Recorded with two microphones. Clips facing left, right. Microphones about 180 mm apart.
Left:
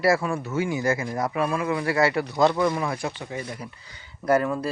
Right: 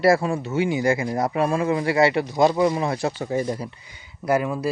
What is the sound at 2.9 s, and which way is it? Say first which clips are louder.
Speech: right 6 dB; 30° right (ahead or behind).